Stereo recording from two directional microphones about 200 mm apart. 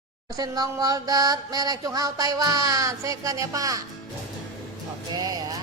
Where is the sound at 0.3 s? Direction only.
20° right (ahead or behind).